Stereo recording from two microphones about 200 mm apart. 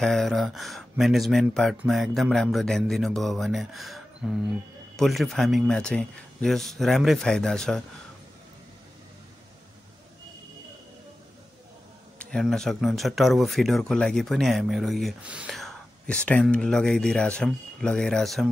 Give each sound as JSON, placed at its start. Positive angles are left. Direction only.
{"t": 0.0, "sound": "speech", "side_deg": 0}
{"t": 12.2, "sound": "speech", "side_deg": 5}